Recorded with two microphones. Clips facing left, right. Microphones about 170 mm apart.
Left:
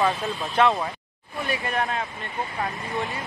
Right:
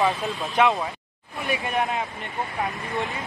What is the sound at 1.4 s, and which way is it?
Speech, 20° right (ahead or behind).